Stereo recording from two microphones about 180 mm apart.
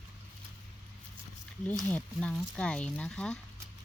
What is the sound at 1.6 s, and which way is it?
Speech, 5° left (ahead or behind).